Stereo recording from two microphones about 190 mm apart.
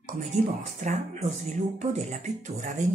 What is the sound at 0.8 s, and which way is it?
Speech, 40° right (ahead or behind).